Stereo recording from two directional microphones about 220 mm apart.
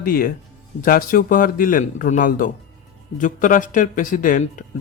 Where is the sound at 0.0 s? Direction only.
40° left (ahead or behind).